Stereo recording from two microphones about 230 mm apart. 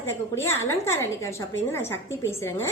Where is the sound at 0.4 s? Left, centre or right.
Centre.